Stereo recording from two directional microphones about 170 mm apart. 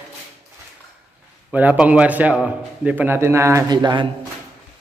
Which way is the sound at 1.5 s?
10° right (ahead or behind).